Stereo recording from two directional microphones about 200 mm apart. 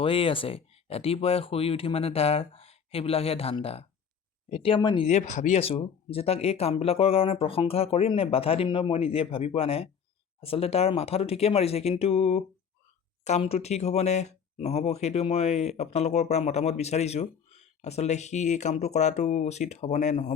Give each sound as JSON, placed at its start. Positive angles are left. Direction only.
{"t": 0.0, "sound": "speech", "side_deg": 25}
{"t": 5.0, "sound": "speech", "side_deg": 35}